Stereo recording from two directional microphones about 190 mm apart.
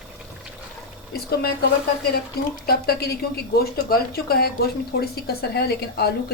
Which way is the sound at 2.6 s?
55° left (ahead or behind).